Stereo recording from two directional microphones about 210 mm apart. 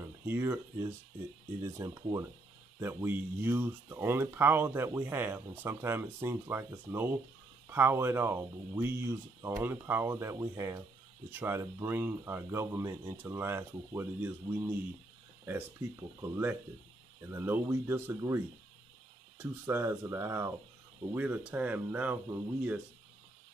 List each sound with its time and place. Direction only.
0.0 s speech: 10° right (ahead or behind)